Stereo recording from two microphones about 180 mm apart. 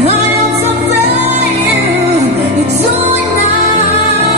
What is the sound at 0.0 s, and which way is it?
Music, 35° right (ahead or behind).